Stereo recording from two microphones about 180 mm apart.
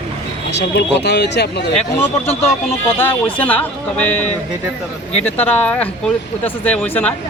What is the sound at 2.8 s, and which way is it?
Speech, 10° left (ahead or behind).